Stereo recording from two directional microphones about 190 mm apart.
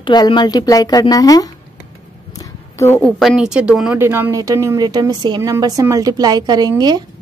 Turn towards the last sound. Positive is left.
turn(degrees=-20)  # may be behind; listen again after turning